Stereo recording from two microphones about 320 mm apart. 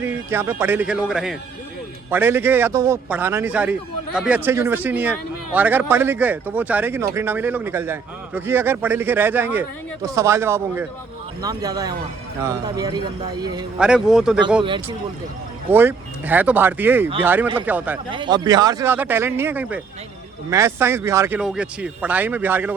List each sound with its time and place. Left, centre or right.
0.0 s a man's voice: centre
14.6 s a man's voice: centre